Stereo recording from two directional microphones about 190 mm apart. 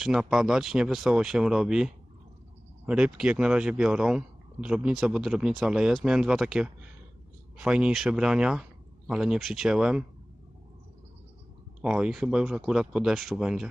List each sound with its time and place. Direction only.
0.0 s speech: 5° right (ahead or behind)
11.8 s speech: 5° right (ahead or behind)